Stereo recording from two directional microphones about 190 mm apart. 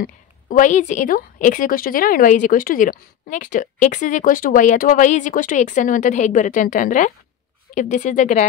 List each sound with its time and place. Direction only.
0.0 s a woman's voice: 45° left (ahead or behind)